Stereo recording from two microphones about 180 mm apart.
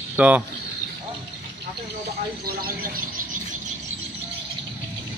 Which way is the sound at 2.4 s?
55° right (ahead or behind).